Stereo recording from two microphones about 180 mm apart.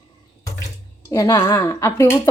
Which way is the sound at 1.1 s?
15° left (ahead or behind).